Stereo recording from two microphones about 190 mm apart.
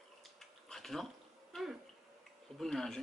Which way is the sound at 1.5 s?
Centre (ahead or behind).